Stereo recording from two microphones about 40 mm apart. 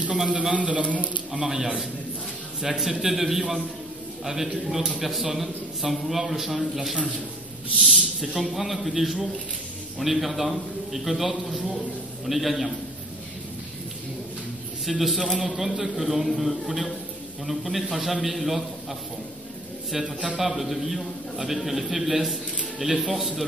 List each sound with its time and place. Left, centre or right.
0.2 s a man's voice: centre
0.6 s a man's voice: right
1.3 s a man's voice: centre
14.9 s a man's voice: centre
20.3 s a man's voice: centre